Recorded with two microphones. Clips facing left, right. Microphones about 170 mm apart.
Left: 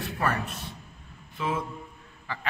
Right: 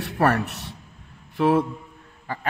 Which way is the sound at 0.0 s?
70° right (ahead or behind).